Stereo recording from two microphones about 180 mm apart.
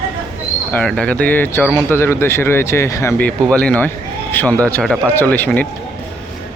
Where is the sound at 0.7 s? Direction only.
5° left (ahead or behind).